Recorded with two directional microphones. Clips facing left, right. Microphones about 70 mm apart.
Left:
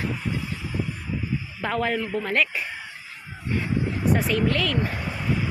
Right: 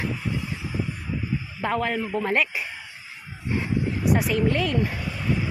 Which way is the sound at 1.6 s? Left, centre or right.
Centre.